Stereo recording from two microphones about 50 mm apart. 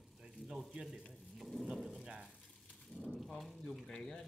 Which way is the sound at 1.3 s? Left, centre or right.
Centre.